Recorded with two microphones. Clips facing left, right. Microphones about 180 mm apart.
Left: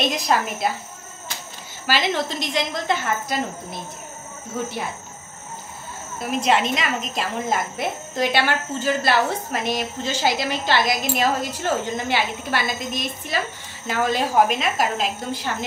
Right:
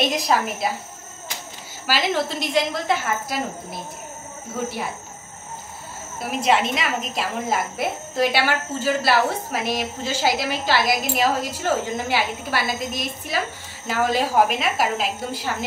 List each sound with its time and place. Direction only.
0.3 s a woman's voice: centre (ahead or behind)
1.9 s a woman's voice: 5° right (ahead or behind)
6.1 s a woman's voice: 5° right (ahead or behind)